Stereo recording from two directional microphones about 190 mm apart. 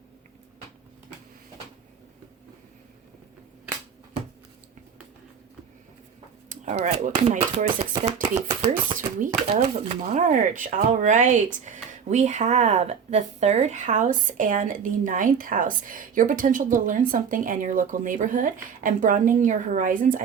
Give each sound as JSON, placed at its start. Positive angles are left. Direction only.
{"t": 6.5, "sound": "speech", "side_deg": -40}